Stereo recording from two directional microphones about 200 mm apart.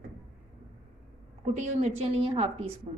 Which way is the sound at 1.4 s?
35° right (ahead or behind).